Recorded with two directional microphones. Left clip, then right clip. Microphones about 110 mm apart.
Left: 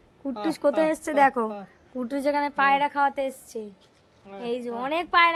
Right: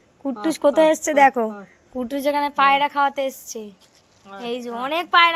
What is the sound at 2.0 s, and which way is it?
A woman's voice, centre (ahead or behind).